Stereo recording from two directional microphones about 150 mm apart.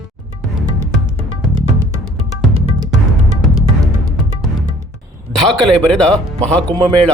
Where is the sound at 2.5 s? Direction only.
25° right (ahead or behind).